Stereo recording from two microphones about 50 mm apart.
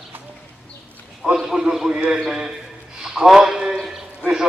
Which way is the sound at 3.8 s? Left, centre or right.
Centre.